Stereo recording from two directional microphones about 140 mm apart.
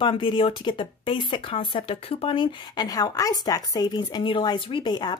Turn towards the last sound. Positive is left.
turn(degrees=30)  # may be behind; listen again after turning